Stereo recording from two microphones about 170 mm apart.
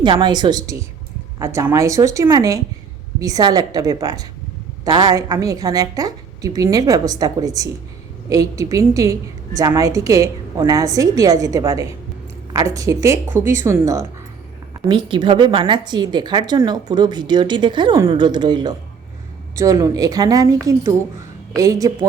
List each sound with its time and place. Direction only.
0.0 s a woman's voice: 25° right (ahead or behind)
14.8 s speech: 25° right (ahead or behind)